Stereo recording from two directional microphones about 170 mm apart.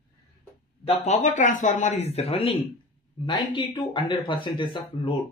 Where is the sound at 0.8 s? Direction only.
45° left (ahead or behind).